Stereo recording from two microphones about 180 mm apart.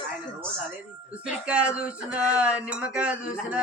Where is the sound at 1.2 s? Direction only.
5° right (ahead or behind).